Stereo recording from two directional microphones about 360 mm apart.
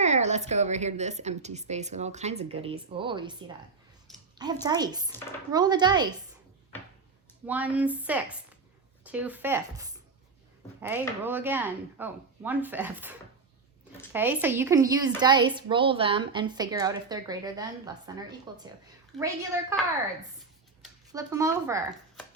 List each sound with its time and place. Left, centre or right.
0.0 s a woman's voice: centre
4.6 s a woman's voice: centre
7.4 s a woman's voice: centre
19.1 s a woman's voice: centre